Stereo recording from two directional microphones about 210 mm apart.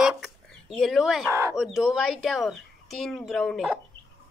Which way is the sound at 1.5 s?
Centre (ahead or behind).